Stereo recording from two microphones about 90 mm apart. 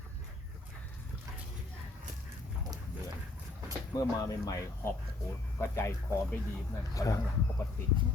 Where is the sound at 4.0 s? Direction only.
40° left (ahead or behind).